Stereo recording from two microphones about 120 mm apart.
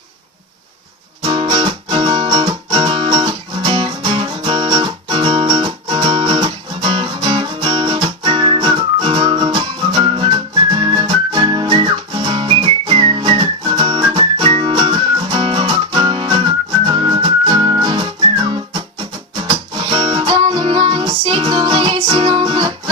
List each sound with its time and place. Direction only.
1.2 s music: 45° right (ahead or behind)